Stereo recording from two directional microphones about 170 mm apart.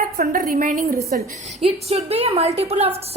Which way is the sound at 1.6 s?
35° right (ahead or behind).